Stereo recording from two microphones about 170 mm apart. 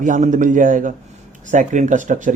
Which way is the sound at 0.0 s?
50° right (ahead or behind).